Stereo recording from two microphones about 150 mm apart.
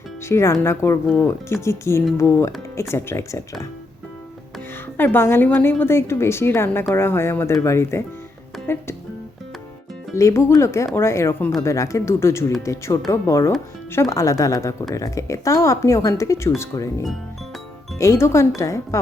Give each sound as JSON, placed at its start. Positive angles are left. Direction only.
{"t": 0.3, "sound": "a woman's voice", "side_deg": 20}
{"t": 4.9, "sound": "a woman's voice", "side_deg": 15}
{"t": 10.2, "sound": "a woman's voice", "side_deg": 20}